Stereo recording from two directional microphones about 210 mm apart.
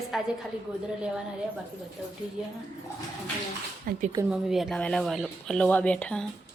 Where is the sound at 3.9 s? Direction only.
40° right (ahead or behind).